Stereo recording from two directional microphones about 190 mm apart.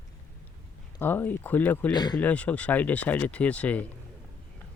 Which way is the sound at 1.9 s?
20° left (ahead or behind).